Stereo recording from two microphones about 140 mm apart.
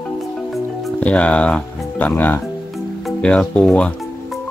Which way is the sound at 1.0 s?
10° left (ahead or behind).